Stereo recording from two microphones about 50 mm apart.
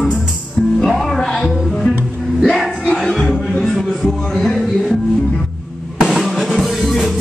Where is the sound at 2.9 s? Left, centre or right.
Centre.